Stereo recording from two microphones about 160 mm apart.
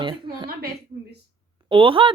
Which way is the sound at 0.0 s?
30° right (ahead or behind).